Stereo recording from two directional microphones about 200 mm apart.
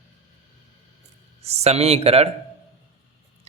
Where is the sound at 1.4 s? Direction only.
30° right (ahead or behind).